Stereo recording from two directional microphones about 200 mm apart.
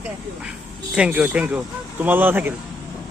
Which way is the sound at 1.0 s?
5° right (ahead or behind).